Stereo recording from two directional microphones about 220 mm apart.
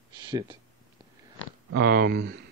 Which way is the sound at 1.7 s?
45° right (ahead or behind).